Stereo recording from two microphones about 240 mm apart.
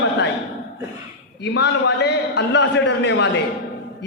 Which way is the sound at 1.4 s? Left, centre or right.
Left.